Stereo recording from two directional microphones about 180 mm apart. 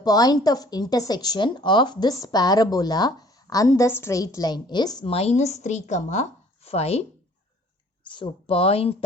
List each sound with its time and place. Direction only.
0.0 s a woman's voice: 20° left (ahead or behind)
8.0 s speech: 25° left (ahead or behind)